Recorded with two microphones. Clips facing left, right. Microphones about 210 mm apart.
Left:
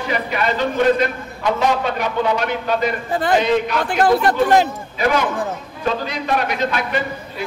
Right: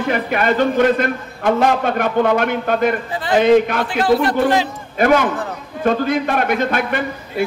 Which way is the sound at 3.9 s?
50° left (ahead or behind).